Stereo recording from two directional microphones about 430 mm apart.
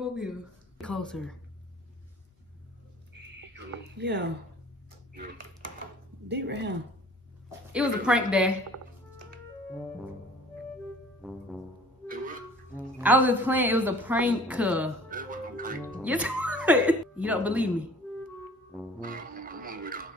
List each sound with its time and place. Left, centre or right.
0.0 s speech: centre
3.5 s a sound: right
6.2 s speech: right
7.7 s a woman's voice: centre
9.7 s music: centre
12.7 s a woman's voice: centre
15.0 s music: centre
16.0 s speech: centre
18.9 s music: centre